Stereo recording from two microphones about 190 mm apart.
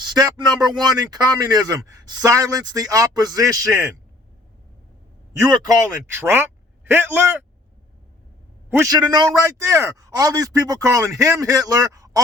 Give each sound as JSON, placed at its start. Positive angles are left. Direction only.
{"t": 0.0, "sound": "a man's voice", "side_deg": -20}
{"t": 5.4, "sound": "speech", "side_deg": -20}
{"t": 8.7, "sound": "a man's voice", "side_deg": -20}